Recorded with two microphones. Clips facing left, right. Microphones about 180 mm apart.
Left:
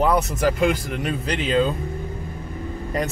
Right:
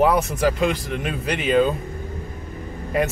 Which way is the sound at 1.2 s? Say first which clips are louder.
Right 1 dB; 55° right (ahead or behind).